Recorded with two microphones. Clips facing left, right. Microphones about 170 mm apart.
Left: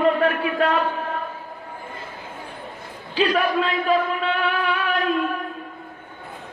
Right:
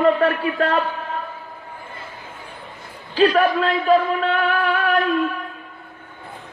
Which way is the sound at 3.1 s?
45° right (ahead or behind).